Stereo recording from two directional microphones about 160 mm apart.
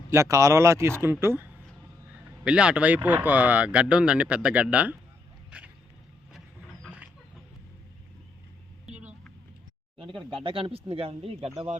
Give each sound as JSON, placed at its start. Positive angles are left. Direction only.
{"t": 0.1, "sound": "speech", "side_deg": -20}
{"t": 5.5, "sound": "a sound", "side_deg": -10}
{"t": 10.2, "sound": "speech", "side_deg": -30}